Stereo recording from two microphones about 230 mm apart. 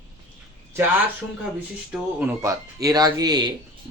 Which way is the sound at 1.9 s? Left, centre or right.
Centre.